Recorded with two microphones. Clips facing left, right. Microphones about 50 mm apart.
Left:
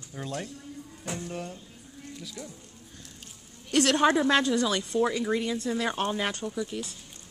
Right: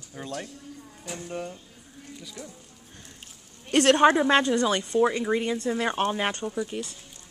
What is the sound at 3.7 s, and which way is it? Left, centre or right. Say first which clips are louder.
A woman's voice: right 4 dB; right.